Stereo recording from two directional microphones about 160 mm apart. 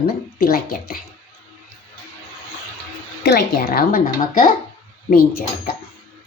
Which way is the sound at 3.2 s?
90° left.